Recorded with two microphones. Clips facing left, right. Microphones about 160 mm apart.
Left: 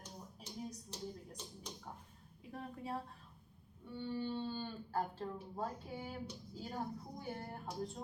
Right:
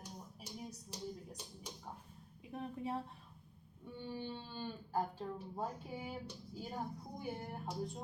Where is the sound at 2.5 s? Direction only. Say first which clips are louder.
Right 3 dB; 20° right (ahead or behind).